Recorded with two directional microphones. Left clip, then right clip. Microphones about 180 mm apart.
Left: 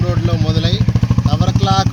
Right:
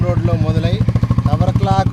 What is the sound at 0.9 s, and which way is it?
Vehicle, 45° left (ahead or behind).